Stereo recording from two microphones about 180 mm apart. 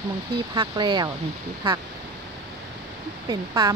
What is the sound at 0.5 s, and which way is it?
Speech, 25° right (ahead or behind).